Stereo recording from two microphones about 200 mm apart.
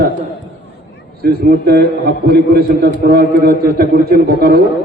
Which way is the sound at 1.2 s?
50° right (ahead or behind).